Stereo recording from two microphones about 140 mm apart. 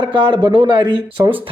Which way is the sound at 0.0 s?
35° right (ahead or behind).